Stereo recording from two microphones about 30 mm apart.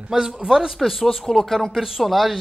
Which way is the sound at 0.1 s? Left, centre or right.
Right.